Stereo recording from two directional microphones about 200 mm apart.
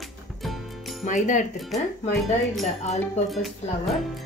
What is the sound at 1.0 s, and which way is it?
Speech, 40° left (ahead or behind).